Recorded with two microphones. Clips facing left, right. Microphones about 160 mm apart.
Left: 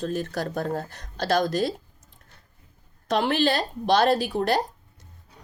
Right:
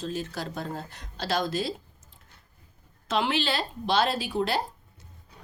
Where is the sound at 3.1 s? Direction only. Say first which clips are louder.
Left 4 dB; 45° left (ahead or behind).